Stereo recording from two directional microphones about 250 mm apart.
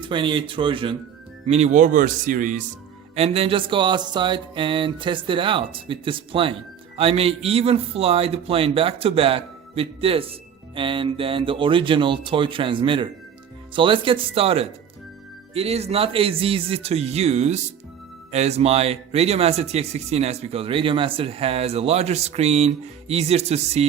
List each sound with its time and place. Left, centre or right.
0.0 s speech: centre